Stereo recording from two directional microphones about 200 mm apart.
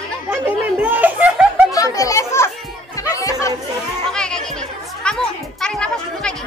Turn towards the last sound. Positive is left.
turn(degrees=5)  # may be behind; listen again after turning